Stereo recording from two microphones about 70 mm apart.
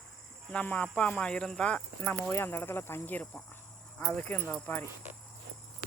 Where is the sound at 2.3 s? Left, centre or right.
Left.